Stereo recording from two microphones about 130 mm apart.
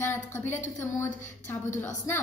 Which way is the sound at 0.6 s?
70° left (ahead or behind).